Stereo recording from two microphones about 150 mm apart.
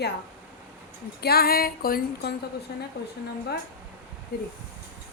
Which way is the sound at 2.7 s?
90° left.